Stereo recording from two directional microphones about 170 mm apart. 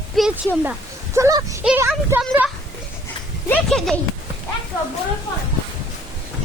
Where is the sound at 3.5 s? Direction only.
Centre (ahead or behind).